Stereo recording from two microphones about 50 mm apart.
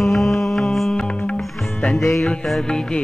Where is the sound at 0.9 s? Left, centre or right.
Centre.